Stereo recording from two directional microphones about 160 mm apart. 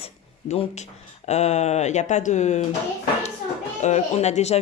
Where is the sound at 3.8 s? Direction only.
45° left (ahead or behind).